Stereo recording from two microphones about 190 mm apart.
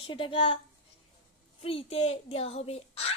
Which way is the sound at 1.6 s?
30° left (ahead or behind).